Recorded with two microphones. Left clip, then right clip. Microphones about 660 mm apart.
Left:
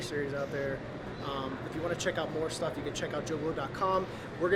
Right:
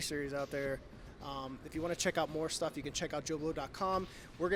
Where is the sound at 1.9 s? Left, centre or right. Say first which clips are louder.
Left 1 dB; right.